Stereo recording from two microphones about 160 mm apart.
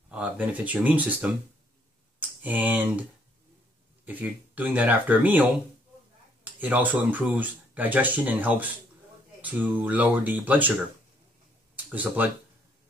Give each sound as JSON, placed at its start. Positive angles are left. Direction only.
{"t": 0.1, "sound": "speech", "side_deg": -10}
{"t": 11.7, "sound": "speech", "side_deg": -10}